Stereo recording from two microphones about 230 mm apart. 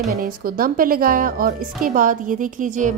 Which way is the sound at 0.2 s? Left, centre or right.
Right.